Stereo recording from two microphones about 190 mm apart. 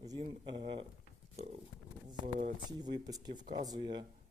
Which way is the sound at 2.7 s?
20° right (ahead or behind).